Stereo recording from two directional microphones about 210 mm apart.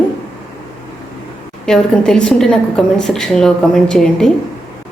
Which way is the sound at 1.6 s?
5° left (ahead or behind).